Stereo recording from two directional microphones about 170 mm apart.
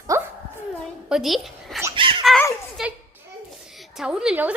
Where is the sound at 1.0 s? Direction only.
Centre (ahead or behind).